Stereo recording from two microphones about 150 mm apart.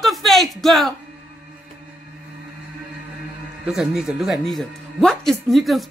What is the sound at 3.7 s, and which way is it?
Speech, 5° right (ahead or behind).